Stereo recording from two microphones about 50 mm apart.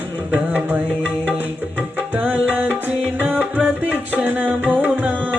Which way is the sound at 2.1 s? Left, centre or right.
Right.